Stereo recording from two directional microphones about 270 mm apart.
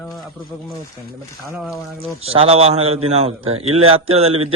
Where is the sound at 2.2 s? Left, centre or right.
Right.